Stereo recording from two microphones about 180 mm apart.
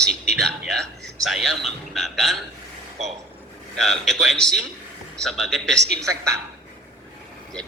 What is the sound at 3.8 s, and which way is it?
A man's voice, centre (ahead or behind).